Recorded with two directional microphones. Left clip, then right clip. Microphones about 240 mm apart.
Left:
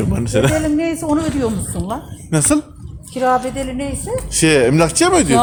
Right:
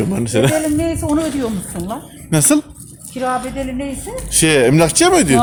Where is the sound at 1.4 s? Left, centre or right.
Left.